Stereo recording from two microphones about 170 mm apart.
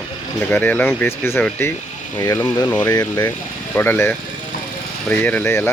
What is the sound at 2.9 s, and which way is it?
Speech, 25° left (ahead or behind).